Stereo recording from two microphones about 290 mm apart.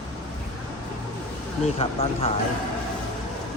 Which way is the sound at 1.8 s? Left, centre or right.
Centre.